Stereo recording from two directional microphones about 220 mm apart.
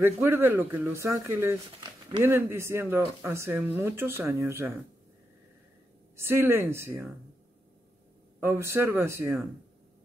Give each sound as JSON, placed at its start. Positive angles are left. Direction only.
{"t": 0.0, "sound": "speech", "side_deg": -15}
{"t": 6.1, "sound": "speech", "side_deg": -10}
{"t": 8.4, "sound": "speech", "side_deg": -10}